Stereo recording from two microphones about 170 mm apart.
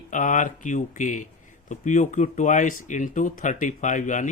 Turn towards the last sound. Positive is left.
turn(degrees=50)  # may be behind; listen again after turning